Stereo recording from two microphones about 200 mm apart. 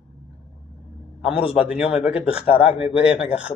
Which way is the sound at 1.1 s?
5° right (ahead or behind).